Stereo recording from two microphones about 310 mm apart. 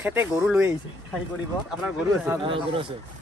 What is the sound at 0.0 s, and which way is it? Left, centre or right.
Speech, centre.